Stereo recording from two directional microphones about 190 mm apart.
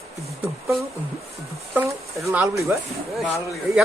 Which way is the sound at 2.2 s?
15° right (ahead or behind).